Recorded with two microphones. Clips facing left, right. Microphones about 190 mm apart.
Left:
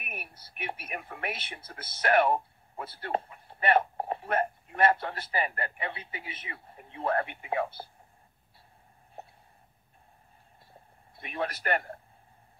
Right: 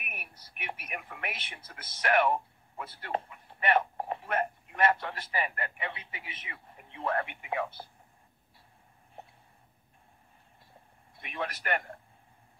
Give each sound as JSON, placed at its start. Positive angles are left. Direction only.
{"t": 0.0, "sound": "speech", "side_deg": 30}
{"t": 11.1, "sound": "speech", "side_deg": 35}